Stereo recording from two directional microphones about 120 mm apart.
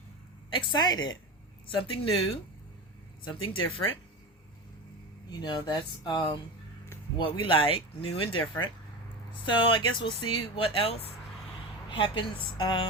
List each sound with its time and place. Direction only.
0.5 s speech: 40° left (ahead or behind)
1.6 s speech: 50° left (ahead or behind)
5.4 s speech: 40° left (ahead or behind)
7.4 s speech: 50° left (ahead or behind)
11.9 s speech: 45° left (ahead or behind)